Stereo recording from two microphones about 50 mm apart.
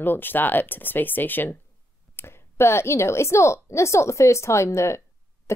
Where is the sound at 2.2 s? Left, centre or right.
Left.